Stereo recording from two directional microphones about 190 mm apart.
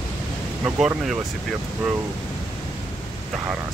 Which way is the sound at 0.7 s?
5° right (ahead or behind).